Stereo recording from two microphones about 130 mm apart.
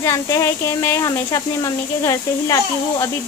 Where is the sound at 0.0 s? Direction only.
25° left (ahead or behind).